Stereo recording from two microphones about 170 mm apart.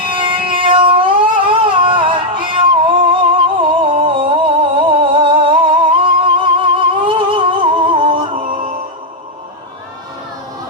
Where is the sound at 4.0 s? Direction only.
30° right (ahead or behind).